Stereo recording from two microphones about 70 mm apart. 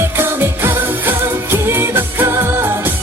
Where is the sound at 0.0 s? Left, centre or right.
Right.